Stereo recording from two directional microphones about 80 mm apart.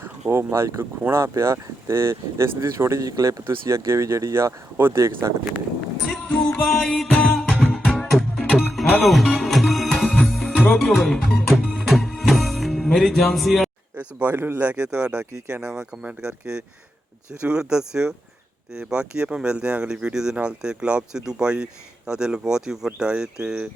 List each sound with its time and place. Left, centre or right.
0.0 s speech: right
3.1 s speech: right
6.1 s music: centre
10.7 s speech: centre
13.9 s speech: right